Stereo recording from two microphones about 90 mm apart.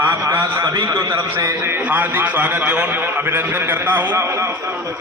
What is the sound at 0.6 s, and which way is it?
Speech, 50° right (ahead or behind).